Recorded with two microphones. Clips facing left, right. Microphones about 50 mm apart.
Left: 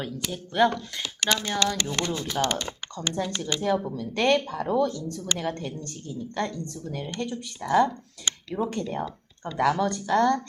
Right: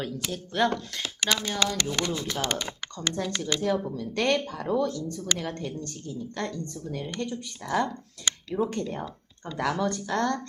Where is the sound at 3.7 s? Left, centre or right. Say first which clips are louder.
Left 2 dB; centre.